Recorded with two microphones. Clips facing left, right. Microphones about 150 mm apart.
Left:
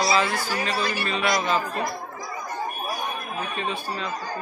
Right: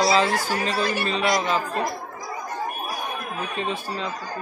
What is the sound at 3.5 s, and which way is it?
Speech, 30° right (ahead or behind).